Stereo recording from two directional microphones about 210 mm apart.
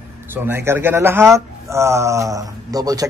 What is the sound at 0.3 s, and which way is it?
A man's voice, 10° right (ahead or behind).